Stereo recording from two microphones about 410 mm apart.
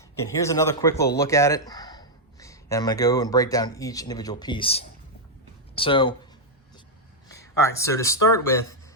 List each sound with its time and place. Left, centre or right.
0.3 s speech: centre
7.3 s speech: centre